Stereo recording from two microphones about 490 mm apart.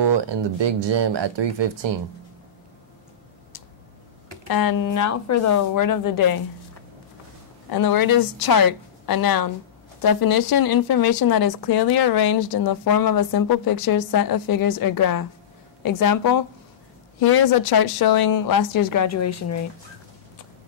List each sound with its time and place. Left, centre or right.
0.0 s speech: right
4.5 s speech: left
7.7 s speech: left